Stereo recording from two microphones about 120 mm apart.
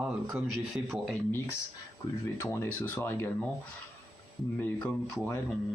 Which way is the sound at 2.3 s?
20° left (ahead or behind).